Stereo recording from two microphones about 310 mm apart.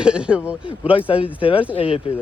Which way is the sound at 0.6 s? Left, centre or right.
Centre.